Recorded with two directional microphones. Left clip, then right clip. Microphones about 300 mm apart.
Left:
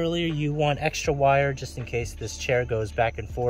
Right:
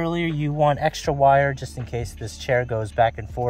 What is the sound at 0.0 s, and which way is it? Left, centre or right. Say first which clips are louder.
Speech: right 1 dB; centre.